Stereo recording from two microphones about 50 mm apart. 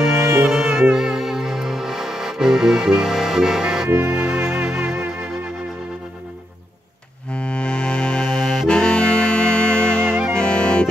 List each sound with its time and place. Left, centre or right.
0.5 s music: centre
5.0 s music: right
7.3 s accordion: left
10.3 s music: centre